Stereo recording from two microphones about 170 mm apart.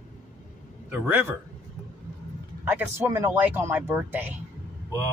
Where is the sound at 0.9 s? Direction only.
10° right (ahead or behind).